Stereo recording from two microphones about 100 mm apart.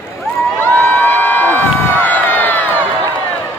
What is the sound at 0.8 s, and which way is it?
Crowd, 15° left (ahead or behind).